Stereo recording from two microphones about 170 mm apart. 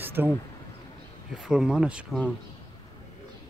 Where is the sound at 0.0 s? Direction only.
10° right (ahead or behind).